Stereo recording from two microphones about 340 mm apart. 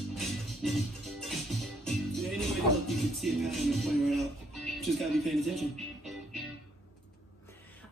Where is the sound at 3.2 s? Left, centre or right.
Centre.